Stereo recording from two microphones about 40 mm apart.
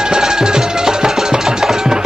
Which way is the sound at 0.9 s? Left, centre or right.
Centre.